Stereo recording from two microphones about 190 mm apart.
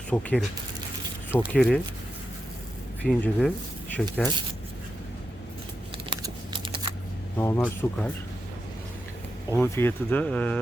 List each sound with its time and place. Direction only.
0.1 s speech: 5° left (ahead or behind)
3.0 s speech: 5° left (ahead or behind)
6.1 s a sound: 25° right (ahead or behind)
7.3 s speech: 15° left (ahead or behind)
9.5 s speech: 10° left (ahead or behind)